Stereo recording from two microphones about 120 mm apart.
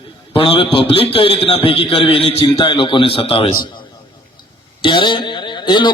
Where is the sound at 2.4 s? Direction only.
35° left (ahead or behind).